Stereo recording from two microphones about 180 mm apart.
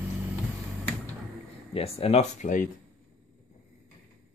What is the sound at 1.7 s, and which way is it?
Speech, 35° left (ahead or behind).